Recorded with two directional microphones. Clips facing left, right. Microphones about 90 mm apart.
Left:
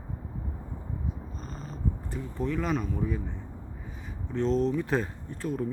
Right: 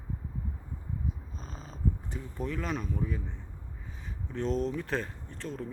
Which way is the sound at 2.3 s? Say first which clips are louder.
Left 5 dB; centre (ahead or behind).